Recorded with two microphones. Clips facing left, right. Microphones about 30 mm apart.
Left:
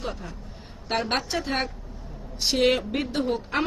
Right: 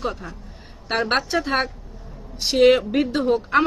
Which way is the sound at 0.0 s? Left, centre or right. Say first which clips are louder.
Right 6 dB; centre.